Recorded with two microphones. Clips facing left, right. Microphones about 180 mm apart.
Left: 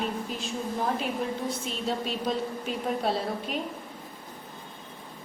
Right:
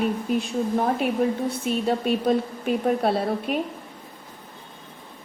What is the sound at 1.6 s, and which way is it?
A woman's voice, 55° right (ahead or behind).